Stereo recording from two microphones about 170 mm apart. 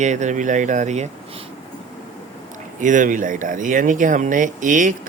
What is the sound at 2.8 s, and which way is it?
Speech, 50° right (ahead or behind).